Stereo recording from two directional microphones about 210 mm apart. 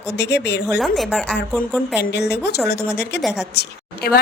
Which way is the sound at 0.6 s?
5° right (ahead or behind).